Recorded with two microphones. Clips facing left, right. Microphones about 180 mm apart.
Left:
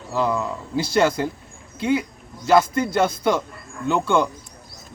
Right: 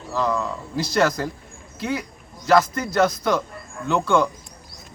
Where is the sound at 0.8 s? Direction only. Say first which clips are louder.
Left 2 dB; 30° left (ahead or behind).